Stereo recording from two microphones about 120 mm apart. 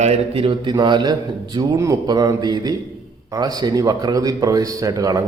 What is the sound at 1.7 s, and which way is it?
Mantra, 30° right (ahead or behind).